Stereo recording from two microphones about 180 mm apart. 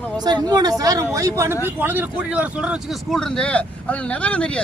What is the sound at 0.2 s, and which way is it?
A man's voice, 20° right (ahead or behind).